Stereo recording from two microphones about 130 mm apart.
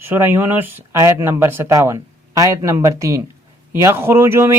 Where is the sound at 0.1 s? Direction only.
15° right (ahead or behind).